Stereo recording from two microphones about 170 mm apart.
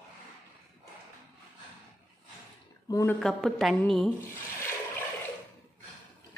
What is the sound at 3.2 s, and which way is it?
Speech, centre (ahead or behind).